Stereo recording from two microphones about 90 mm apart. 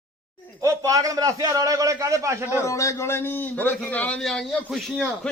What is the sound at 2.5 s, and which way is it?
A man's voice, 35° left (ahead or behind).